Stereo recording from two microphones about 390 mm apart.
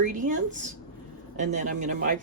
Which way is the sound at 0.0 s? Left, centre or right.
Centre.